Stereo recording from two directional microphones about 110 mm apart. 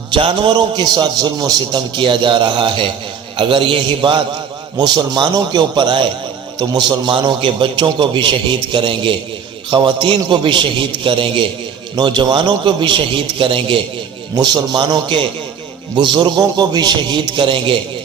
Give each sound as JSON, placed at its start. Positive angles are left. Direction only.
{"t": 0.1, "sound": "a man's voice", "side_deg": -50}
{"t": 14.3, "sound": "a man's voice", "side_deg": -40}